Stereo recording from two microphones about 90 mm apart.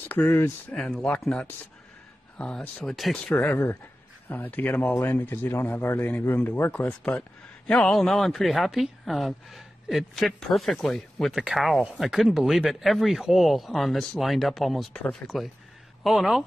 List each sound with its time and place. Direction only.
0.1 s speech: 20° left (ahead or behind)
1.2 s a man's voice: 10° left (ahead or behind)
3.2 s a man's voice: 15° left (ahead or behind)
14.9 s speech: 10° left (ahead or behind)
15.2 s a man's voice: centre (ahead or behind)